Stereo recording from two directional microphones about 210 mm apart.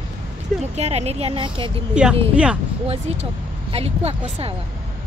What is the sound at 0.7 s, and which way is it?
Speech, 30° right (ahead or behind).